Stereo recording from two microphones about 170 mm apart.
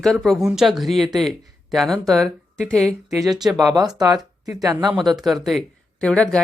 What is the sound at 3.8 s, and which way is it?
Speech, 25° right (ahead or behind).